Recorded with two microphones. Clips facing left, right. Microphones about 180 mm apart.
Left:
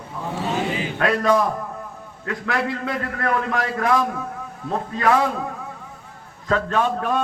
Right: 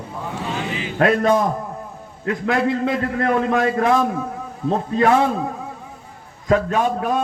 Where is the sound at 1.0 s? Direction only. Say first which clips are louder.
Right 3 dB; 25° right (ahead or behind).